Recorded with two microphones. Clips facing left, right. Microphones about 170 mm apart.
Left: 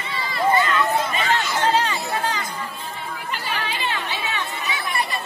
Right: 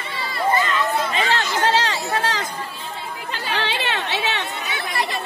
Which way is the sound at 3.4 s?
85° right.